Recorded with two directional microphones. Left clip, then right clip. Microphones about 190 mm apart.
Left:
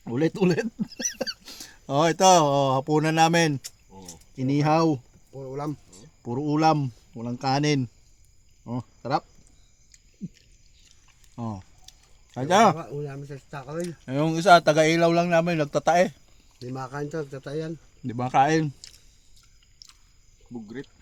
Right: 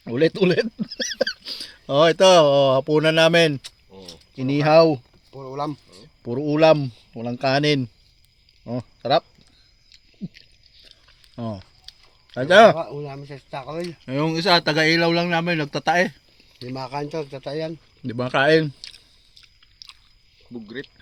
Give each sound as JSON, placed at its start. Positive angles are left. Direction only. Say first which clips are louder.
{"t": 0.0, "sound": "speech", "louder": "right 5 dB", "side_deg": 10}
{"t": 11.3, "sound": "a sound", "louder": "right 4 dB", "side_deg": 10}
{"t": 13.7, "sound": "speech", "louder": "even", "side_deg": 10}
{"t": 18.0, "sound": "speech", "louder": "right 2 dB", "side_deg": 10}